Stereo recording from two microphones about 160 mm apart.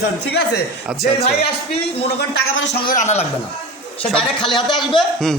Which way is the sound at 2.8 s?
50° left (ahead or behind).